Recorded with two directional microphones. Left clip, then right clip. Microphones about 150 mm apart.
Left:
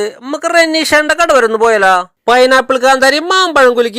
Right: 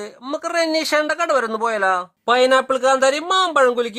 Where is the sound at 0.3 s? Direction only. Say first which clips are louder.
Left 9 dB; 35° left (ahead or behind).